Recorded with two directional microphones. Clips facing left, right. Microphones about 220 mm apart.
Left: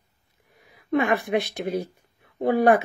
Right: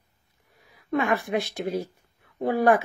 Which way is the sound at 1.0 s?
20° left (ahead or behind).